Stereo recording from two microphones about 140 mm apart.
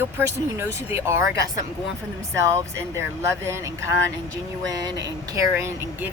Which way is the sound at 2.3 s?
20° right (ahead or behind).